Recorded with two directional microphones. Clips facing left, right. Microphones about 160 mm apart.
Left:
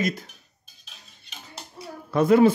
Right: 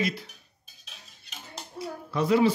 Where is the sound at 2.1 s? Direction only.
50° left (ahead or behind).